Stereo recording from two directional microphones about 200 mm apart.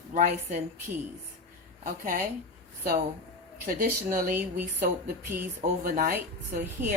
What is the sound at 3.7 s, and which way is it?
Speech, 45° right (ahead or behind).